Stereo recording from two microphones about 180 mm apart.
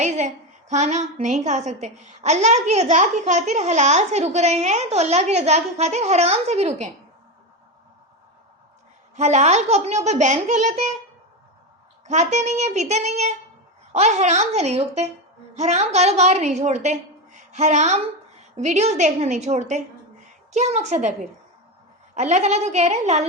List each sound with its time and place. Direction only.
0.0 s a woman's voice: 40° right (ahead or behind)
9.1 s a woman's voice: 40° right (ahead or behind)
12.0 s a woman's voice: 40° right (ahead or behind)
22.1 s a woman's voice: 40° right (ahead or behind)